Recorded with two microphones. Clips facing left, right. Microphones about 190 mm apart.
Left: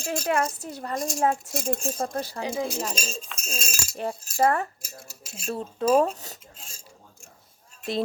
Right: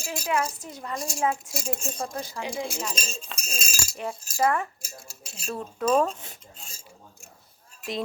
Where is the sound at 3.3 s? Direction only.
Centre (ahead or behind).